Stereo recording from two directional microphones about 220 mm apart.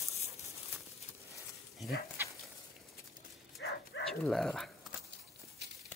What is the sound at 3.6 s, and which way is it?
Bow-wow, 55° left (ahead or behind).